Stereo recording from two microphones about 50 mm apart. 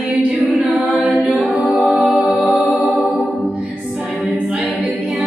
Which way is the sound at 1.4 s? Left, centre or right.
Centre.